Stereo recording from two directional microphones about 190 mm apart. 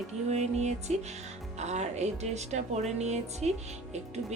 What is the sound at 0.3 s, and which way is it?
Speech, 35° right (ahead or behind).